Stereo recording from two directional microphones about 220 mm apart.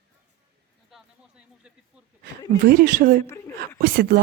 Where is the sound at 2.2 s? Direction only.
40° right (ahead or behind).